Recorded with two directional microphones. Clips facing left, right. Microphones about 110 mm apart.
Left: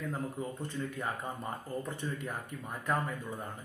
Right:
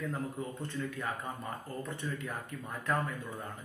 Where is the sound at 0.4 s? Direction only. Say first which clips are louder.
Even; 15° left (ahead or behind).